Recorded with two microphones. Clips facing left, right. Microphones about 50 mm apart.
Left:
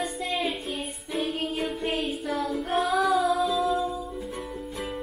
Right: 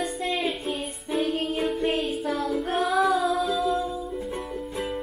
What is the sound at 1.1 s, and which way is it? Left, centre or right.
Music, centre.